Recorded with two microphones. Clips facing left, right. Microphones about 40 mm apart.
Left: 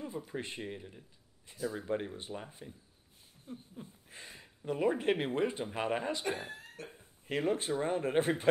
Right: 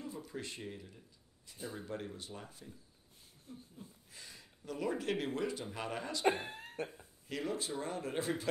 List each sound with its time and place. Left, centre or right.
0.0 s speech: left
6.2 s speech: right
7.2 s speech: left